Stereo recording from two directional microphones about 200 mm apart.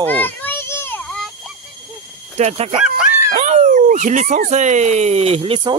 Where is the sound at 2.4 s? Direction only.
35° right (ahead or behind).